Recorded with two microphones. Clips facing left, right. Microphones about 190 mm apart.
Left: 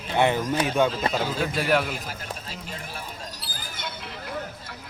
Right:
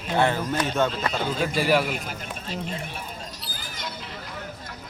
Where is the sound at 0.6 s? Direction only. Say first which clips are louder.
Left 2 dB; 10° left (ahead or behind).